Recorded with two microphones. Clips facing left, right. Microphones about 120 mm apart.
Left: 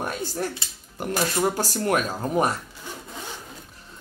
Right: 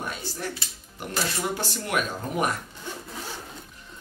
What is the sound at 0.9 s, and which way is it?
Speech, 40° left (ahead or behind).